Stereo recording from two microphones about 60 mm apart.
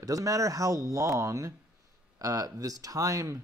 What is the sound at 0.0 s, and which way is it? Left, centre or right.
Speech, right.